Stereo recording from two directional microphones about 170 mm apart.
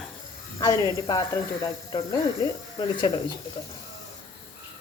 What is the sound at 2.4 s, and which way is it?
Speech, 25° left (ahead or behind).